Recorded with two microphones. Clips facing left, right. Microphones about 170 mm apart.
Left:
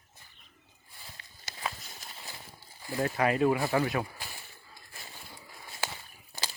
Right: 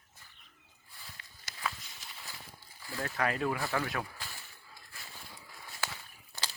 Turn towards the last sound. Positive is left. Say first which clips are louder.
# left 2 dB
turn(degrees=15)  # may be behind; listen again after turning